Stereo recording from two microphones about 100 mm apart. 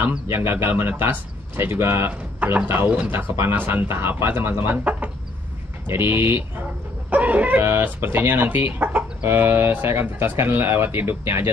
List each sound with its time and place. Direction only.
0.3 s speech: 25° right (ahead or behind)